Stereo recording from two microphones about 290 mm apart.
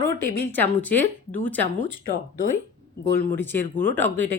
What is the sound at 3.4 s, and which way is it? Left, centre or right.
Speech, centre.